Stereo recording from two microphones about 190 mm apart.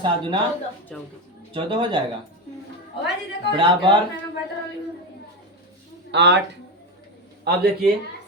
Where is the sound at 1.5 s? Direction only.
25° right (ahead or behind).